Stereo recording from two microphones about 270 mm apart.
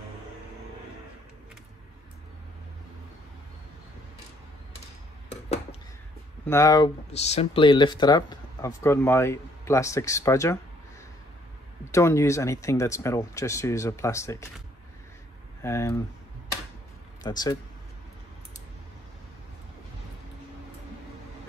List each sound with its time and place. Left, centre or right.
5.3 s a sound: left
6.4 s speech: centre
7.2 s speech: left
11.9 s speech: centre
15.6 s speech: centre
17.2 s speech: centre